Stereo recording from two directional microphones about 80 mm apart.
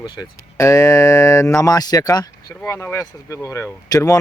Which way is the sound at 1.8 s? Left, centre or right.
Left.